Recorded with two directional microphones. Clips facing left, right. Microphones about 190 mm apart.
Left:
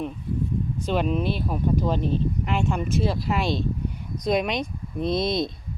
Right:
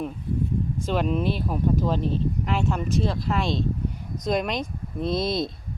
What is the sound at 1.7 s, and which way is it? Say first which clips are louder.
A woman's voice: left 1 dB; 5° left (ahead or behind).